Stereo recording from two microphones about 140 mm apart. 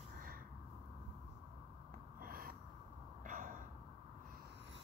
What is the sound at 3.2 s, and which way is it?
Gasp, 75° right (ahead or behind).